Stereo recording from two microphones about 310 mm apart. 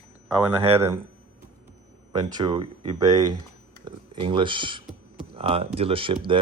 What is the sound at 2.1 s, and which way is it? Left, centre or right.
Speech, centre.